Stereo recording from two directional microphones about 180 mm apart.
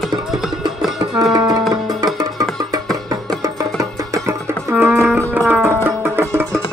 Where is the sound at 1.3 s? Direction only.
20° right (ahead or behind).